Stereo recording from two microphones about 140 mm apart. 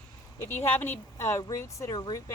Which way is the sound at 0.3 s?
15° left (ahead or behind).